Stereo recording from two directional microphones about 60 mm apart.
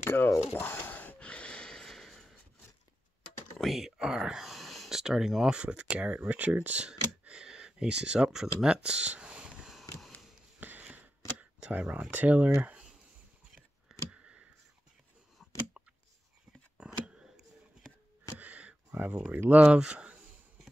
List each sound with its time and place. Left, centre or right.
0.0 s a sound: left
0.6 s gasp: left; by 2.3 s centre
3.5 s speech: centre; by 6.9 s right
6.9 s a sound: centre
10.6 s a sound: right
11.3 s camera: right
12.1 s speech: right
14.1 s clicking: centre
16.8 s scissors: centre
18.4 s a sound: right
18.9 s speech: right
19.1 s speech: right